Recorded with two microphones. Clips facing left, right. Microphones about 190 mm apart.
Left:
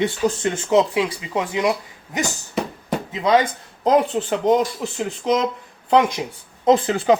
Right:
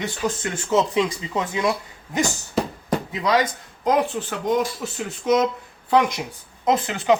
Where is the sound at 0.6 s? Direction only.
10° left (ahead or behind).